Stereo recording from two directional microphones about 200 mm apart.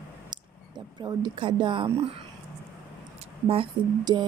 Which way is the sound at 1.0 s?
20° right (ahead or behind).